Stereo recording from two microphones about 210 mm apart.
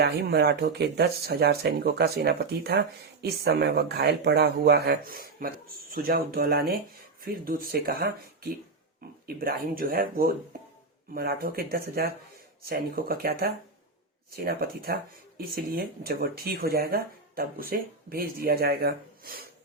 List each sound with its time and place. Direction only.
0.0 s speech: 50° right (ahead or behind)